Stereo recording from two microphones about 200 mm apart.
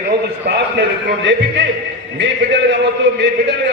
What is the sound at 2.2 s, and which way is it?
A man's voice, 65° right (ahead or behind).